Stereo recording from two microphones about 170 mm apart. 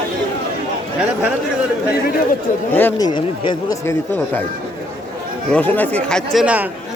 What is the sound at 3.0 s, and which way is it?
Speech, 25° left (ahead or behind).